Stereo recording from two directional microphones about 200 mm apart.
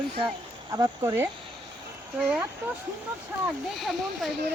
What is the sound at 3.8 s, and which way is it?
Speech, centre (ahead or behind).